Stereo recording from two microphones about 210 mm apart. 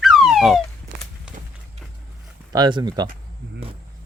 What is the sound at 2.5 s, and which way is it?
Speech, 20° right (ahead or behind).